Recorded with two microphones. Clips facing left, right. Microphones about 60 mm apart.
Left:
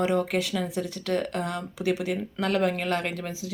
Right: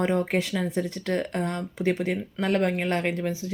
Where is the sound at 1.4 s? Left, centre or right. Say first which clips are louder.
Right 1 dB; left.